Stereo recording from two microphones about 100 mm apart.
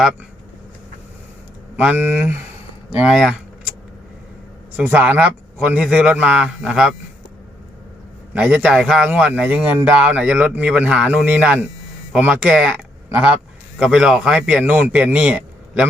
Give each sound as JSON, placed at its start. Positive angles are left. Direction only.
{"t": 1.7, "sound": "speech", "side_deg": -15}
{"t": 2.9, "sound": "speech", "side_deg": -10}
{"t": 4.8, "sound": "speech", "side_deg": -15}
{"t": 8.3, "sound": "speech", "side_deg": -15}
{"t": 13.7, "sound": "speech", "side_deg": -5}